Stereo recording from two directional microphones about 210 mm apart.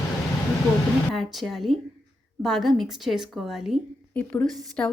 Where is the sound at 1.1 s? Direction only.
Centre (ahead or behind).